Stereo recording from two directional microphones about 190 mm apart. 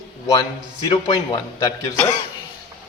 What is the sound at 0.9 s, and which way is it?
A man's voice, 25° left (ahead or behind).